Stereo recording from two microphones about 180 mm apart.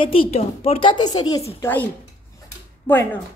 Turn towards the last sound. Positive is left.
turn(degrees=10)  # may be behind; listen again after turning